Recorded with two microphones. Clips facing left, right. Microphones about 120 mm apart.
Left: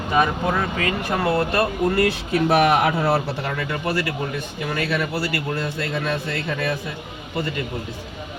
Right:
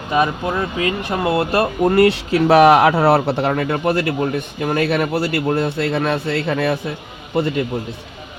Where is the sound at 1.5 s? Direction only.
40° right (ahead or behind).